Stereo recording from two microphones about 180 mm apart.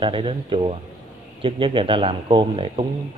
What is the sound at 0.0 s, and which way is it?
A man's voice, 30° right (ahead or behind).